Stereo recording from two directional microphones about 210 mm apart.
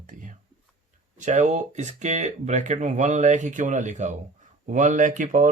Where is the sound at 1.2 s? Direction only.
35° right (ahead or behind).